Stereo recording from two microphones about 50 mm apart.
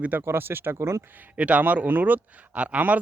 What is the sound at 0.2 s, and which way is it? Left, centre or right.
Speech, right.